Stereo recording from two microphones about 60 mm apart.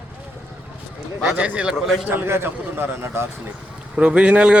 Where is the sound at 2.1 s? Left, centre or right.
Right.